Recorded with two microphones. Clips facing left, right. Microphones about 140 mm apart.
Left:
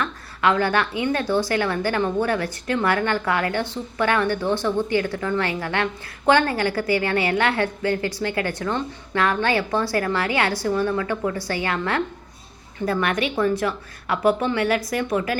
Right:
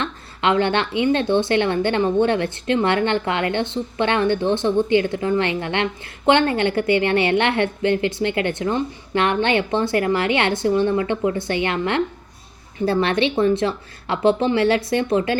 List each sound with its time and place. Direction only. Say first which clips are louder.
0.0 s a woman's voice: even; 25° right (ahead or behind)